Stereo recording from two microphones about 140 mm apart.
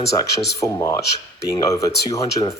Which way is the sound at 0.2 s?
25° left (ahead or behind).